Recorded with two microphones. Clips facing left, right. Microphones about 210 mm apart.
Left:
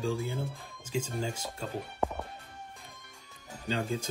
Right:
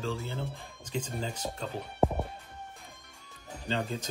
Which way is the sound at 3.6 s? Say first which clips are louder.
Left 1 dB; 10° left (ahead or behind).